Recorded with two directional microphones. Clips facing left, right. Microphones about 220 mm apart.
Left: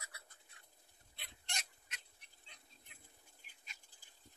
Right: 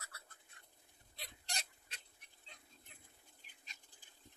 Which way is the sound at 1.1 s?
35° right (ahead or behind).